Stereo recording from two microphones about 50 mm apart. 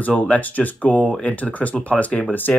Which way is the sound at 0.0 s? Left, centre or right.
Left.